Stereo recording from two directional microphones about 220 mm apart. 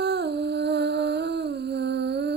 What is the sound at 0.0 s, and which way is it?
Humming, 50° right (ahead or behind).